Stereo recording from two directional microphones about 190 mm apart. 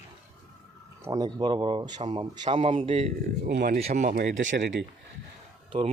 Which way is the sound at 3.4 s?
60° right (ahead or behind).